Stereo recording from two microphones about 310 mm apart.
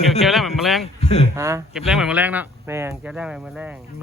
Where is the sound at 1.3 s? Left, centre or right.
Centre.